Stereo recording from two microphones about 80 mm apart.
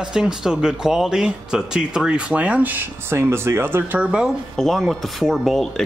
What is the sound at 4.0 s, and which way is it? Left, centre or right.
Speech, centre.